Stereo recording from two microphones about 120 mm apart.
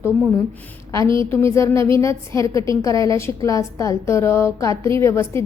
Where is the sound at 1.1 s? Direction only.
25° left (ahead or behind).